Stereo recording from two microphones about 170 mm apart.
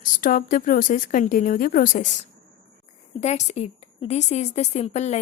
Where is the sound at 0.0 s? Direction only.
55° left (ahead or behind).